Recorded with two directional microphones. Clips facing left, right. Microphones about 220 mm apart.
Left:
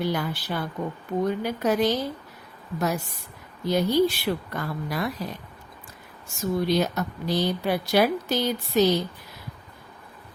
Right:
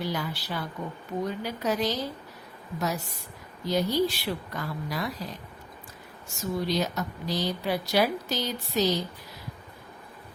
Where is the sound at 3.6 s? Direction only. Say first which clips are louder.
Left 4 dB; 60° left (ahead or behind).